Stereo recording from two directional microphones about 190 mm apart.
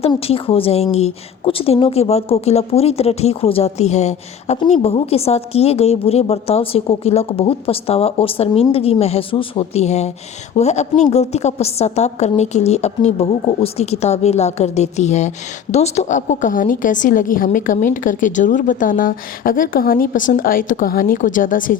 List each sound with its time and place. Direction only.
0.0 s a woman's voice: 30° left (ahead or behind)